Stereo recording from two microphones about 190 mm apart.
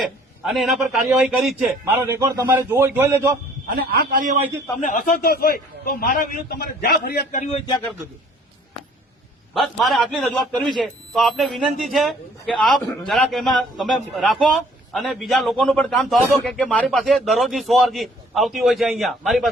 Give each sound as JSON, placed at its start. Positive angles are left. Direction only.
{"t": 0.0, "sound": "a man's voice", "side_deg": 0}
{"t": 1.9, "sound": "a man's voice", "side_deg": -15}
{"t": 4.1, "sound": "a man's voice", "side_deg": -40}
{"t": 4.8, "sound": "a man's voice", "side_deg": 45}
{"t": 9.6, "sound": "a man's voice", "side_deg": 0}